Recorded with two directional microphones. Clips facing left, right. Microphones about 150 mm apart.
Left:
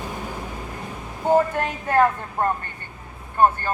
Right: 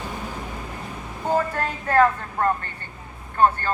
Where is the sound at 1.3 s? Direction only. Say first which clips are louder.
Left 4 dB; 15° left (ahead or behind).